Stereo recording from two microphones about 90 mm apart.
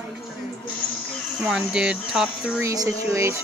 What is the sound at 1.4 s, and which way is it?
A woman's voice, 5° right (ahead or behind).